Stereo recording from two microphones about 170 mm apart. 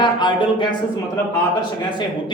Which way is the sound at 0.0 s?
25° left (ahead or behind).